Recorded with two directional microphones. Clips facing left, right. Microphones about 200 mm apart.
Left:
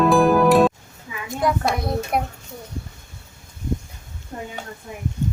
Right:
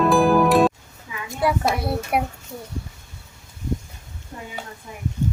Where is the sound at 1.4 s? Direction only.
5° right (ahead or behind).